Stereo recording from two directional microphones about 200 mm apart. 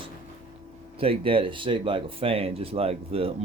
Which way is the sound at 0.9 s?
30° right (ahead or behind).